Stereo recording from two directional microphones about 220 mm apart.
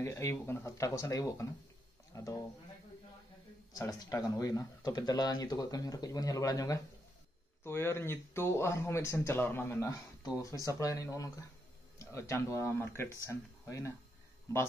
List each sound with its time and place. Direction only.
0.0 s speech: 10° left (ahead or behind)
3.7 s speech: 15° left (ahead or behind)